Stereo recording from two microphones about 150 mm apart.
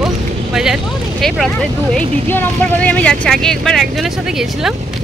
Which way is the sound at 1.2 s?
Centre (ahead or behind).